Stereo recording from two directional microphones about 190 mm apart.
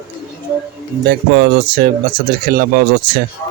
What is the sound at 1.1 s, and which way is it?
Speech, 60° right (ahead or behind).